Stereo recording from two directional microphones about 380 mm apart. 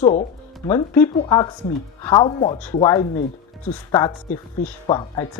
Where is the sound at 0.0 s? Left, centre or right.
Centre.